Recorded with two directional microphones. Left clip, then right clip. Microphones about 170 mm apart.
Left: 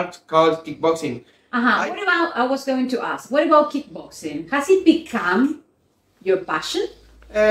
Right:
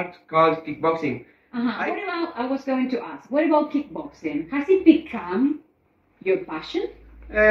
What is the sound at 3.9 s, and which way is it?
Speech, 25° left (ahead or behind).